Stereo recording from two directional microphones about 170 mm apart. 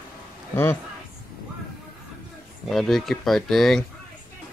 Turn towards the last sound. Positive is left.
turn(degrees=0)  # may be behind; listen again after turning